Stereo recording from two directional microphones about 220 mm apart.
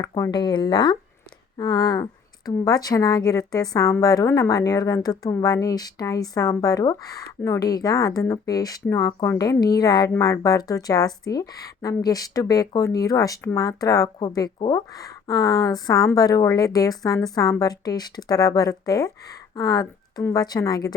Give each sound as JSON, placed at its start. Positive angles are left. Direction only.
{"t": 0.0, "sound": "a woman's voice", "side_deg": 20}